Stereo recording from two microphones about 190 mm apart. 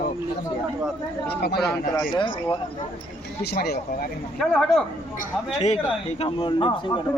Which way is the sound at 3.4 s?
55° left (ahead or behind).